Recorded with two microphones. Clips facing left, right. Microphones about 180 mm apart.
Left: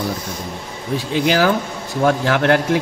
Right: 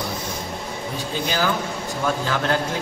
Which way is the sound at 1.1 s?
80° left.